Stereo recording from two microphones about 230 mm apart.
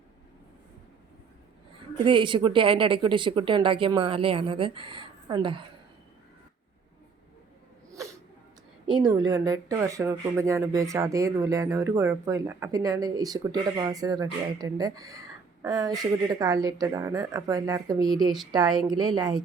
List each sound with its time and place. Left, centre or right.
2.0 s a woman's voice: right
7.9 s sneeze: centre
9.1 s speech: centre